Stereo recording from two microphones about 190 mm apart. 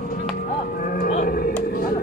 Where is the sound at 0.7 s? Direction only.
45° left (ahead or behind).